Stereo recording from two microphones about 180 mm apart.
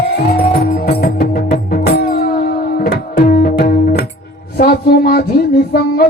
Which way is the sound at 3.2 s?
55° left (ahead or behind).